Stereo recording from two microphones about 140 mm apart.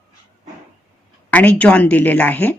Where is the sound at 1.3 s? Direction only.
10° left (ahead or behind).